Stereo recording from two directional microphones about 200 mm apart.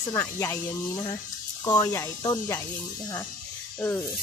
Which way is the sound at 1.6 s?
15° left (ahead or behind).